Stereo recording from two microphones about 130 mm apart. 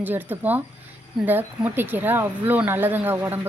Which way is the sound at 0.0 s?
15° right (ahead or behind).